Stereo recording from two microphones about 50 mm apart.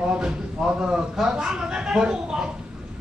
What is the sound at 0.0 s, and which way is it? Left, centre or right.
A man's voice, centre.